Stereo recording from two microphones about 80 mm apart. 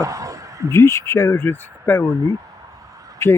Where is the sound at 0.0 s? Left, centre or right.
Right.